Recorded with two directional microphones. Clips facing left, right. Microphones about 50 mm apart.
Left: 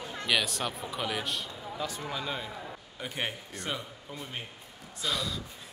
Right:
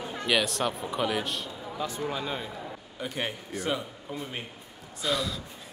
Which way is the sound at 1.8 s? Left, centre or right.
Right.